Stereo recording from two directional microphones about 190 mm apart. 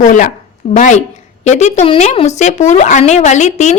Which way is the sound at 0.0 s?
45° left (ahead or behind).